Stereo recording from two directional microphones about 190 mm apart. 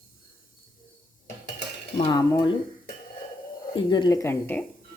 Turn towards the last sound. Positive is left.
turn(degrees=10)  # may be behind; listen again after turning